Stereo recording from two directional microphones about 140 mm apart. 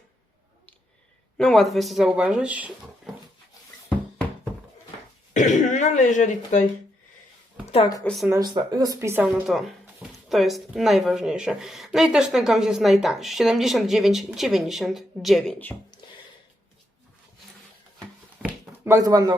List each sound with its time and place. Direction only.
1.4 s speech: 5° left (ahead or behind)
5.3 s speech: 65° left (ahead or behind)
8.0 s speech: centre (ahead or behind)
8.3 s speech: 30° right (ahead or behind)
9.2 s speech: centre (ahead or behind)
18.4 s a sound: centre (ahead or behind)
18.9 s speech: 25° right (ahead or behind)